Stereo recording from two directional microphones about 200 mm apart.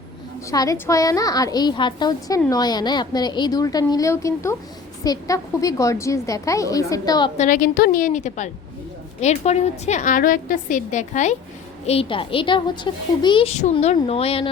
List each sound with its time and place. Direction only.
0.5 s a woman's voice: 15° left (ahead or behind)
7.3 s a woman's voice: 40° left (ahead or behind)